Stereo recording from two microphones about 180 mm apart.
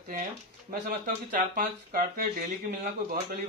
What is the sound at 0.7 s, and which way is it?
Speech, 45° right (ahead or behind).